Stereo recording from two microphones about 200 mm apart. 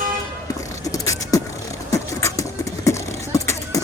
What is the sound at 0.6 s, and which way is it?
Beatboxing, 15° left (ahead or behind).